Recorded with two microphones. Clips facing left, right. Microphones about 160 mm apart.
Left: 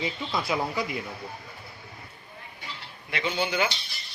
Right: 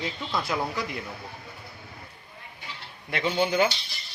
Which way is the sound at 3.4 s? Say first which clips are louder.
Right 5 dB; 35° right (ahead or behind).